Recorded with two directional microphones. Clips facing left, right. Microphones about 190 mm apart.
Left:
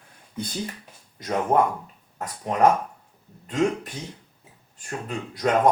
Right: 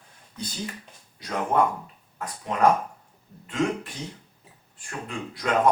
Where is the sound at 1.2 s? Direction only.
45° left (ahead or behind).